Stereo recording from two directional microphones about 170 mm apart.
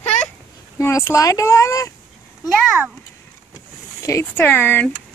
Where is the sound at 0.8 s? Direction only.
15° left (ahead or behind).